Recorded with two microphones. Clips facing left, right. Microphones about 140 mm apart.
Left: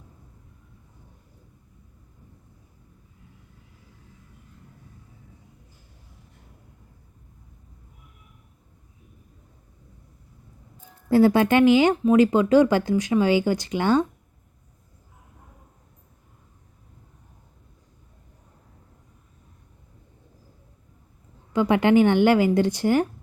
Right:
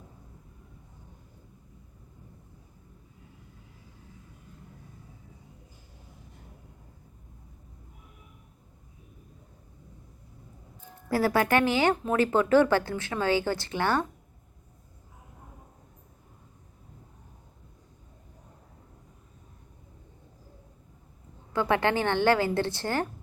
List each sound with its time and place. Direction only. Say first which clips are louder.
11.1 s speech: left 7 dB; 20° left (ahead or behind)
21.5 s speech: left 7 dB; 15° left (ahead or behind)